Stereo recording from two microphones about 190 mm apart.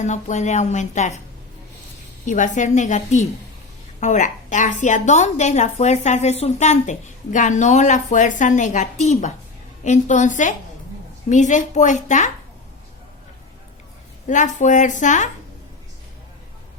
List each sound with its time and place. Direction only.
0.0 s a woman's voice: 40° left (ahead or behind)
2.2 s a woman's voice: 40° left (ahead or behind)
14.3 s a woman's voice: 40° left (ahead or behind)